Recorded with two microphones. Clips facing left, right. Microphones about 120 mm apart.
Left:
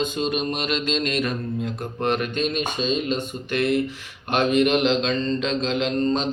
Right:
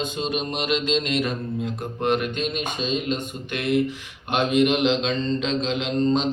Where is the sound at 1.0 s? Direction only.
25° right (ahead or behind).